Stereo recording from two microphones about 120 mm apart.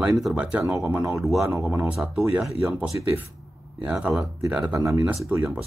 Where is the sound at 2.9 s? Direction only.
20° right (ahead or behind).